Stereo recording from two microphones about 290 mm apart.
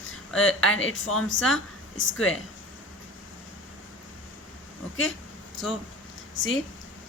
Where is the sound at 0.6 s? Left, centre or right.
Left.